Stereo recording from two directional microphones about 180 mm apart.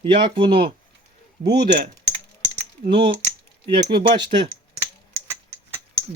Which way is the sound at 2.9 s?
30° right (ahead or behind).